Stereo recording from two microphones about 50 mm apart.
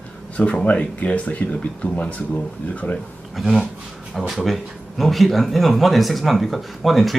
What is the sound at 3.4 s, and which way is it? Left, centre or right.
Speech, centre.